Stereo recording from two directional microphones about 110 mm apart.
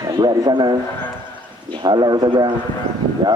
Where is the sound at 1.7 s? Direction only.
40° right (ahead or behind).